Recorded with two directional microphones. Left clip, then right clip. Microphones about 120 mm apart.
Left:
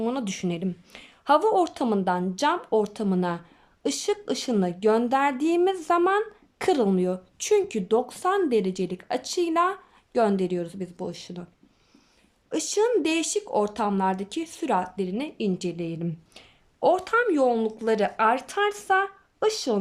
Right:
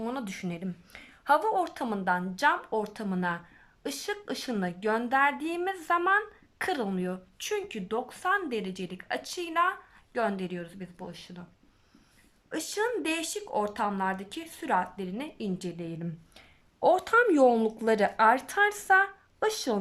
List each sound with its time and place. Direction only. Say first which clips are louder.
0.0 s a woman's voice: left 7 dB; 25° left (ahead or behind)
12.5 s speech: left 7 dB; 25° left (ahead or behind)
16.9 s speech: even; 5° left (ahead or behind)